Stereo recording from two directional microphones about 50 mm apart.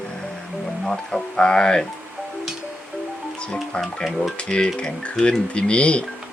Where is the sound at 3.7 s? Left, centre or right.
Centre.